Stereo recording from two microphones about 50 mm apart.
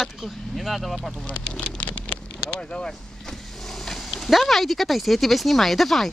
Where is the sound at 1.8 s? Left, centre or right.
Left.